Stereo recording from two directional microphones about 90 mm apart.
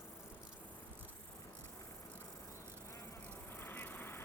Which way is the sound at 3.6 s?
25° left (ahead or behind).